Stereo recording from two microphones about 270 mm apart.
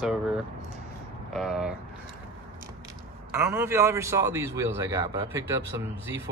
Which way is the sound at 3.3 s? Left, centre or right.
Centre.